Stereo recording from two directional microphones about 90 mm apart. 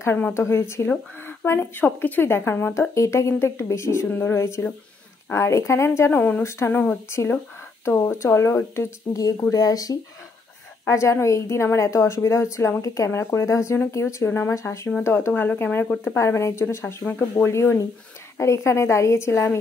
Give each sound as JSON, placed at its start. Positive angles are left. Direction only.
{"t": 0.0, "sound": "a woman's voice", "side_deg": 30}
{"t": 6.7, "sound": "a woman's voice", "side_deg": 20}
{"t": 16.2, "sound": "a woman's voice", "side_deg": 30}
{"t": 16.8, "sound": "speech", "side_deg": 20}
{"t": 17.5, "sound": "a woman's voice", "side_deg": 30}